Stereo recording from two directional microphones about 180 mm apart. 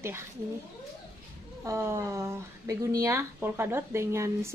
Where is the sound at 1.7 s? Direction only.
15° right (ahead or behind).